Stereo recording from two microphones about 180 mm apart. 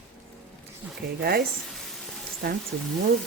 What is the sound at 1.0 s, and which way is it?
Stir, 60° right (ahead or behind).